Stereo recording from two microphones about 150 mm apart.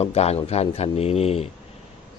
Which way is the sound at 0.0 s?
45° left (ahead or behind).